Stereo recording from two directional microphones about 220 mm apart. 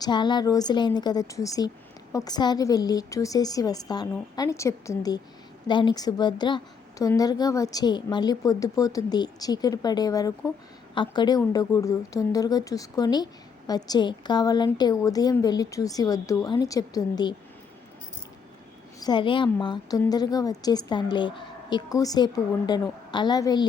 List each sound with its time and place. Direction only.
0.0 s a woman's voice: 20° left (ahead or behind)
18.9 s a woman's voice: 20° left (ahead or behind)